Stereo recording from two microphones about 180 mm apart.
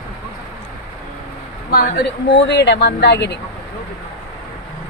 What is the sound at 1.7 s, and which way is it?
Speech, 60° left (ahead or behind).